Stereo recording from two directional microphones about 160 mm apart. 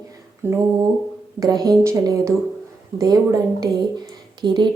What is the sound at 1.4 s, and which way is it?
A woman's voice, 25° right (ahead or behind).